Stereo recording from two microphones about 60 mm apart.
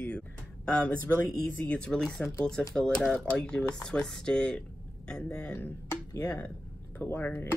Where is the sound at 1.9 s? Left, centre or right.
Centre.